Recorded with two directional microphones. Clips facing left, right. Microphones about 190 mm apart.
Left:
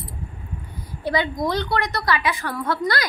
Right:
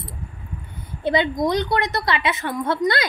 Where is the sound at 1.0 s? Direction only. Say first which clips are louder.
Right 3 dB; 20° right (ahead or behind).